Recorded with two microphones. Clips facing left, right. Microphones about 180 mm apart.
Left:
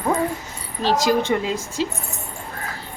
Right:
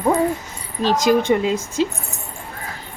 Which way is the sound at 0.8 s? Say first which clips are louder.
Right 3 dB; 15° right (ahead or behind).